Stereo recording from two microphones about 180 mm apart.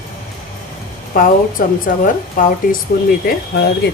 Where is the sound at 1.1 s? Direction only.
50° left (ahead or behind).